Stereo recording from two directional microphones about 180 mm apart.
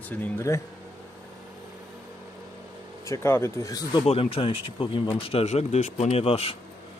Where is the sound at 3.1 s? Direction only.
15° left (ahead or behind).